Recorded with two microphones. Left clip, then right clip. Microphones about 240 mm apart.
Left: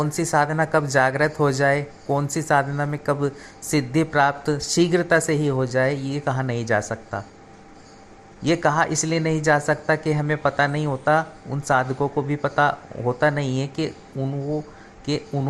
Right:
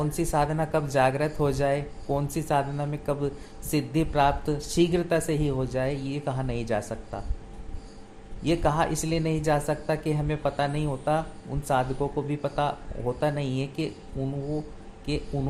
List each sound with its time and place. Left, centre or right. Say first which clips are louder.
0.0 s speech: left 5 dB; centre
8.4 s speech: left 5 dB; centre